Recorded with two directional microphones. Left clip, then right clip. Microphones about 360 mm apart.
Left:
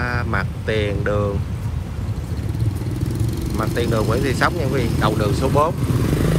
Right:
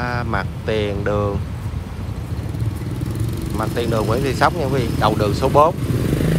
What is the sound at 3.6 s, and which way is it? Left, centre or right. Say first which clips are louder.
Speech: right 1 dB; centre.